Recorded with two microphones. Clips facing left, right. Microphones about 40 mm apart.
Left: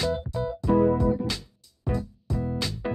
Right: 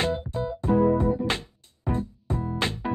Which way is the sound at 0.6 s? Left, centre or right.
Right.